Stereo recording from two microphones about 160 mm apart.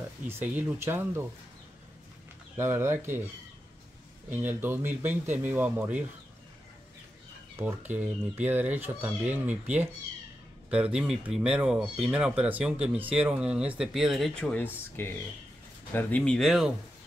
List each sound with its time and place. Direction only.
0.2 s speech: 10° right (ahead or behind)
2.5 s speech: 15° right (ahead or behind)
4.3 s speech: 10° right (ahead or behind)
7.5 s speech: 10° right (ahead or behind)